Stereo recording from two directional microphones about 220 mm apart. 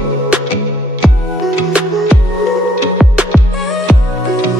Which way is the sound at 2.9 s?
Centre (ahead or behind).